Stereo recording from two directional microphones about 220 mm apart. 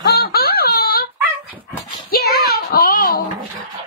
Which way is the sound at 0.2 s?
45° left (ahead or behind).